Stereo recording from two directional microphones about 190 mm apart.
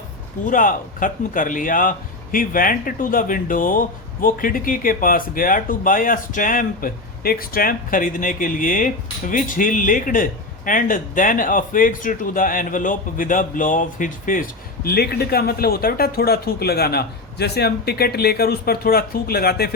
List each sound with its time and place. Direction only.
0.4 s speech: 45° left (ahead or behind)
14.8 s a man's voice: 55° left (ahead or behind)